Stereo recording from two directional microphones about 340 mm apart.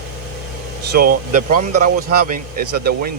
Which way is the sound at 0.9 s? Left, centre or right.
Right.